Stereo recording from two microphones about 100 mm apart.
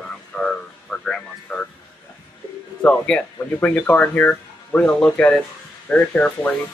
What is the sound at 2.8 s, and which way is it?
Speech, 10° left (ahead or behind).